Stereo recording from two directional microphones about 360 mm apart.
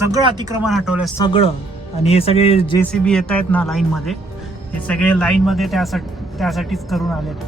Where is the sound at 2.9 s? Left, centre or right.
Centre.